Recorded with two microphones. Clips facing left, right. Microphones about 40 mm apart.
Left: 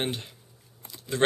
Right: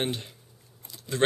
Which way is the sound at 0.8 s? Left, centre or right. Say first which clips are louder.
Left 2 dB; centre.